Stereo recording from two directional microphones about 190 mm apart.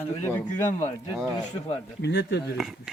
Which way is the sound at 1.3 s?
20° left (ahead or behind).